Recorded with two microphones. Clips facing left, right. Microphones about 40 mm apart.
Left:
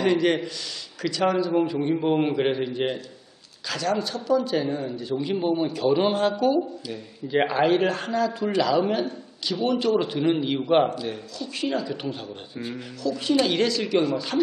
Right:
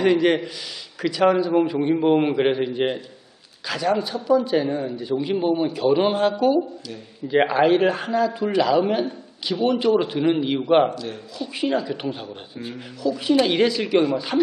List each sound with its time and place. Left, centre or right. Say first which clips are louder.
0.0 s a man's voice: right 3 dB; centre
6.6 s speech: even; centre
7.3 s a man's voice: right 3 dB; centre